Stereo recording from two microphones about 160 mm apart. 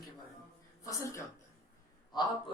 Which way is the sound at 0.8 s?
20° left (ahead or behind).